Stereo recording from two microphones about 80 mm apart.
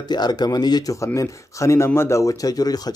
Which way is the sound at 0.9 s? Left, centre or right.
Left.